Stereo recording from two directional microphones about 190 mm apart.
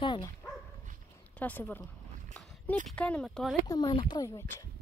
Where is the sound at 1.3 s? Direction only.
10° left (ahead or behind).